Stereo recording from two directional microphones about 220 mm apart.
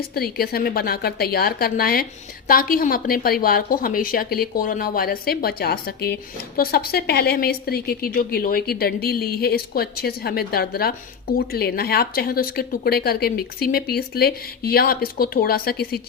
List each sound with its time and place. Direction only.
0.0 s a woman's voice: 45° left (ahead or behind)